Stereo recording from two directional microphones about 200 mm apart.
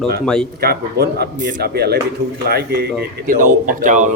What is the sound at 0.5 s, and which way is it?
A man's voice, 50° right (ahead or behind).